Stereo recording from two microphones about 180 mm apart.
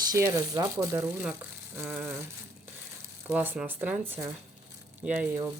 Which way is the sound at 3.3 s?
10° right (ahead or behind).